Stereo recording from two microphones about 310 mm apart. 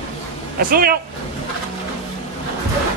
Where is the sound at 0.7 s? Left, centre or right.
Right.